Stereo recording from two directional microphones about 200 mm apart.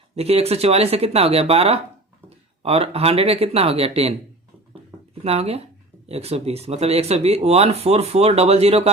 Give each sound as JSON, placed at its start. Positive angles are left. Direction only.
{"t": 0.2, "sound": "speech", "side_deg": -30}
{"t": 5.2, "sound": "speech", "side_deg": -30}